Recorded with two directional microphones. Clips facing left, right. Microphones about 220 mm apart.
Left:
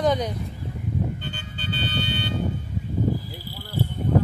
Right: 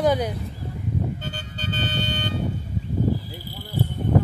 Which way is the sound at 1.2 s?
40° right (ahead or behind).